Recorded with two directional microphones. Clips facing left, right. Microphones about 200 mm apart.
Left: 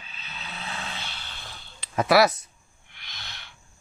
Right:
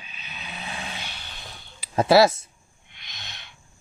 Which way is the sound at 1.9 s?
25° right (ahead or behind).